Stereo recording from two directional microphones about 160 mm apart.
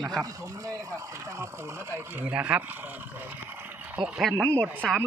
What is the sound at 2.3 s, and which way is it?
Speech, 10° right (ahead or behind).